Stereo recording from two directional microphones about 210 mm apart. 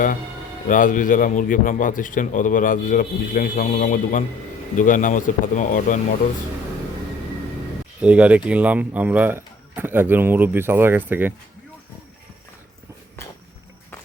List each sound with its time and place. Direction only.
0.7 s a man's voice: 40° left (ahead or behind)
8.0 s speech: 5° right (ahead or behind)